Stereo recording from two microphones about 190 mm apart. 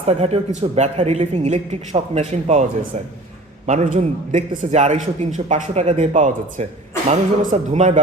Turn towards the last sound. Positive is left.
turn(degrees=-40)  # may be behind; listen again after turning